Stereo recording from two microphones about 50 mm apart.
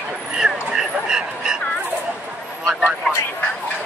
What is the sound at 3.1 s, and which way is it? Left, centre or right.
Speech, centre.